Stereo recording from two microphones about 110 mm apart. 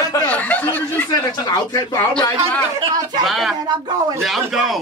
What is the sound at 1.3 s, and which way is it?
Speech, 40° left (ahead or behind).